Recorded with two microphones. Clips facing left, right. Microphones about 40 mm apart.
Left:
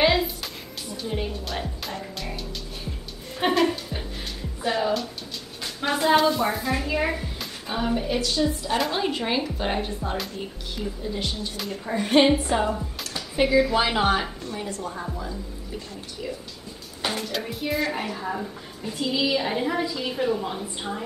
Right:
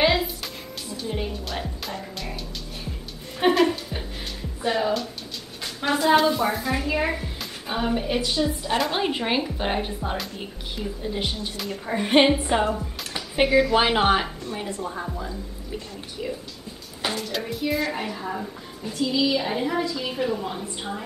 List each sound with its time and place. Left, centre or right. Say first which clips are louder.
0.0 s music: even; centre
1.0 s a woman's voice: even; centre
5.6 s a sound: right 1 dB; centre
6.0 s a woman's voice: even; centre
11.5 s a woman's voice: even; centre
11.9 s speech: even; centre
13.5 s a woman's voice: right 1 dB; centre
13.7 s speech: right 2 dB; right
15.0 s a woman's voice: right 1 dB; centre
17.3 s a woman's voice: right 2 dB; centre
18.9 s a woman's voice: right 1 dB; centre